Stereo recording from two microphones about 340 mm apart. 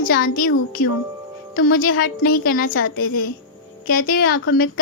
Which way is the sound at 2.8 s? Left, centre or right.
Left.